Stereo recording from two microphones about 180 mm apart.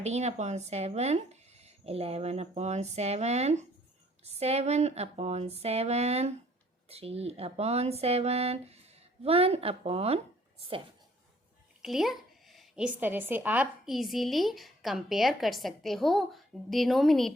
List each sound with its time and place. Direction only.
0.0 s speech: 40° right (ahead or behind)
11.8 s a woman's voice: centre (ahead or behind)